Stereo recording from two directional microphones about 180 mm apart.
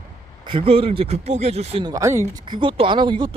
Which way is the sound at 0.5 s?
30° right (ahead or behind).